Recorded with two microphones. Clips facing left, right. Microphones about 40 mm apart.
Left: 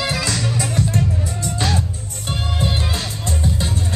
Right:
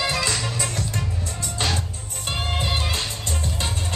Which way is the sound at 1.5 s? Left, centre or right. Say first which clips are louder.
Left 3 dB; centre.